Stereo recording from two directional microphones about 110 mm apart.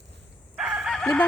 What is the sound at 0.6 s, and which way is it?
Chicken, 5° right (ahead or behind).